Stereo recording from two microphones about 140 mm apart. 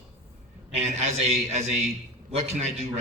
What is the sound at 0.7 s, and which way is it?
A man's voice, 50° right (ahead or behind).